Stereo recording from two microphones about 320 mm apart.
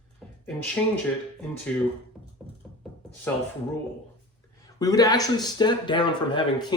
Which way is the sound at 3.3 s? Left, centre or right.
Centre.